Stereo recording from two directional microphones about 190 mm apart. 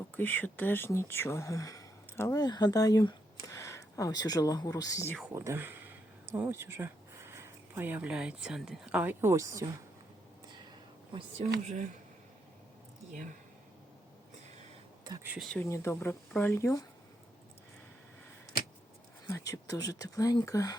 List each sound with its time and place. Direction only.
0.1 s speech: 10° left (ahead or behind)
5.3 s speech: 15° right (ahead or behind)
10.7 s a sound: 25° right (ahead or behind)
11.6 s speech: 40° right (ahead or behind)
15.0 s speech: 20° right (ahead or behind)
15.3 s speech: centre (ahead or behind)
15.7 s speech: 15° left (ahead or behind)
19.3 s speech: 20° left (ahead or behind)